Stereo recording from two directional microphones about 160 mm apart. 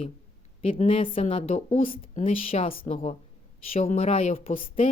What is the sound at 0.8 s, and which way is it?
A woman's voice, 35° left (ahead or behind).